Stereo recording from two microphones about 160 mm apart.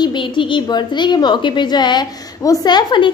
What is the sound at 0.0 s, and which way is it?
A woman's voice, 30° left (ahead or behind).